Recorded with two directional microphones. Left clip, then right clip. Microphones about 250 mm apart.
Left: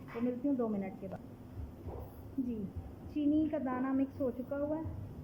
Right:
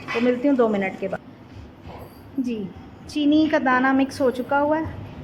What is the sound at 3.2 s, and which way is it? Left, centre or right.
Speech, right.